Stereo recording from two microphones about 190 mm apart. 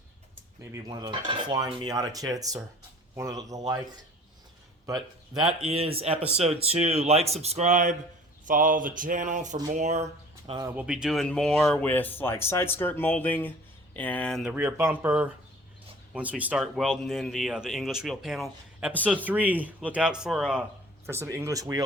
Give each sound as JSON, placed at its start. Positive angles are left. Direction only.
{"t": 0.7, "sound": "cutlery", "side_deg": -20}
{"t": 3.2, "sound": "speech", "side_deg": -15}
{"t": 4.9, "sound": "cutlery", "side_deg": -20}
{"t": 5.5, "sound": "speech", "side_deg": -30}
{"t": 10.6, "sound": "speech", "side_deg": -10}
{"t": 14.5, "sound": "speech", "side_deg": -10}
{"t": 21.1, "sound": "speech", "side_deg": -15}